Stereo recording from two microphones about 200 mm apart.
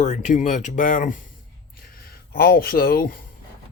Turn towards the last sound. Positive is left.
turn(degrees=45)  # may be behind; listen again after turning